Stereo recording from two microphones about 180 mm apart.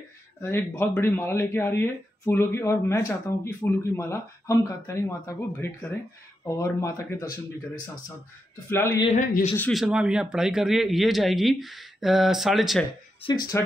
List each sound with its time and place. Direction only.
0.4 s speech: 15° left (ahead or behind)
9.0 s speech: 40° left (ahead or behind)
9.6 s a man's voice: centre (ahead or behind)
13.2 s speech: 25° left (ahead or behind)